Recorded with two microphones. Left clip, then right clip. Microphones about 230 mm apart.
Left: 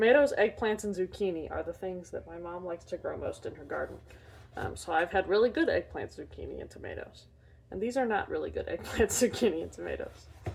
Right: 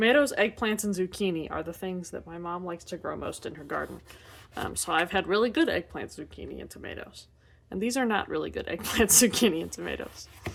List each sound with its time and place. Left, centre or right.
0.0 s speech: right